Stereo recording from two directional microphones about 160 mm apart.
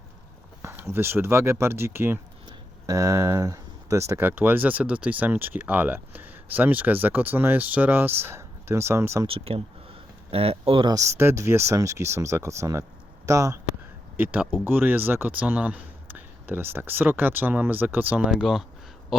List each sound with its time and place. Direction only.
0.6 s speech: 15° right (ahead or behind)
9.2 s speech: 35° right (ahead or behind)
11.2 s speech: 15° right (ahead or behind)